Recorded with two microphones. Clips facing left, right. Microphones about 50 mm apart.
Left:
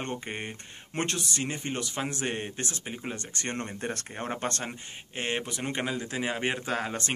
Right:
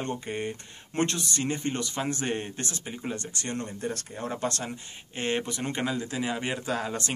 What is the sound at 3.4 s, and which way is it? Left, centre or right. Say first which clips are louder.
Speech: left 1 dB; left.